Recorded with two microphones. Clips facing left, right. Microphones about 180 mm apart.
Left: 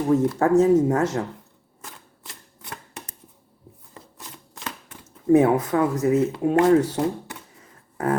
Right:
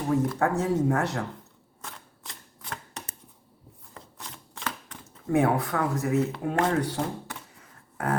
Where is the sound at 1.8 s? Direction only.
5° left (ahead or behind).